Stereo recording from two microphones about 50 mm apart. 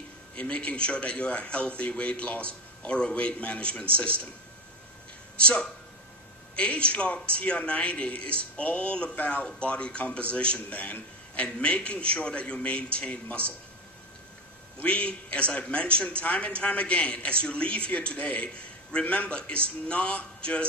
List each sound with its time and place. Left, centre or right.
0.4 s a man's voice: left
5.4 s a man's voice: centre
14.9 s a man's voice: left